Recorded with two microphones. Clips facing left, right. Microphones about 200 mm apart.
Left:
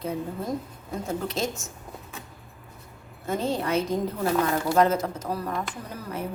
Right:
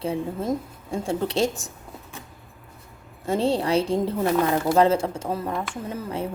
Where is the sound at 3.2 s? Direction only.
30° right (ahead or behind).